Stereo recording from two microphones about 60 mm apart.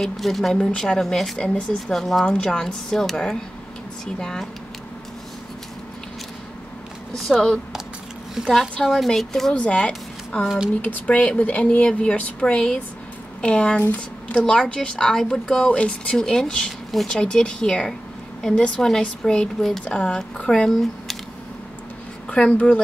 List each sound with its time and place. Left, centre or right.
0.0 s a woman's voice: centre
0.6 s speech: centre
7.2 s a woman's voice: centre
9.6 s speech: centre
20.7 s a sound: centre
22.3 s speech: centre